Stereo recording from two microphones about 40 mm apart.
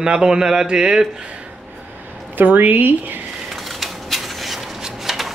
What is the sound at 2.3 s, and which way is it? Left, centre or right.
Speech, right.